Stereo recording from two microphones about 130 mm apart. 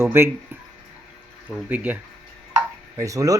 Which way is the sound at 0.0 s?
20° right (ahead or behind).